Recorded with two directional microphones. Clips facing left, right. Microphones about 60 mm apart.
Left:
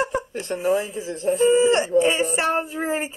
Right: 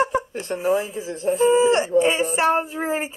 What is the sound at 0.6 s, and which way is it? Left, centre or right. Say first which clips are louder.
Speech: even; right.